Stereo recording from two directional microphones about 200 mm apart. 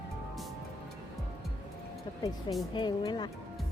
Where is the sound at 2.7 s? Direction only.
20° left (ahead or behind).